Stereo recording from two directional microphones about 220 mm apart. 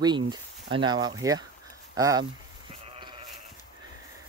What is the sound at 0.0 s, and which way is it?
Speech, 20° right (ahead or behind).